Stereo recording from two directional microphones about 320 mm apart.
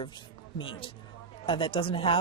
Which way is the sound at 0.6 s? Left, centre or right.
Centre.